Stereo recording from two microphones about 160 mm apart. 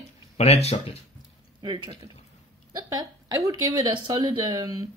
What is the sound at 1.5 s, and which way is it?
Speech, 30° right (ahead or behind).